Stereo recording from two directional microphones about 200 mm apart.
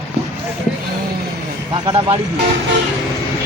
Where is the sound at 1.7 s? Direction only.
25° right (ahead or behind).